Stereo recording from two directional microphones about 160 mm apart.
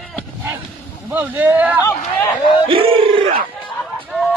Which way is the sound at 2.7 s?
35° right (ahead or behind).